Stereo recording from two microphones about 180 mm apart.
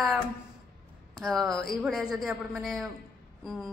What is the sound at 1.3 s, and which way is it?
A woman's voice, centre (ahead or behind).